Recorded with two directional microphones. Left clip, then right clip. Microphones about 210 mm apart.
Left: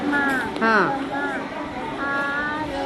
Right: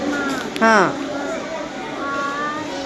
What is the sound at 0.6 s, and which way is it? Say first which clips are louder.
Speech: right 5 dB; 15° right (ahead or behind).